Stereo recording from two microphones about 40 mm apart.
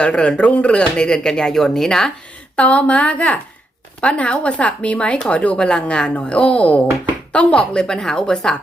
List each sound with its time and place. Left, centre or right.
0.0 s speech: left
2.6 s speech: left; by 8.5 s centre